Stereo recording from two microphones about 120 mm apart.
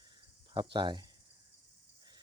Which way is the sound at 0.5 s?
40° right (ahead or behind).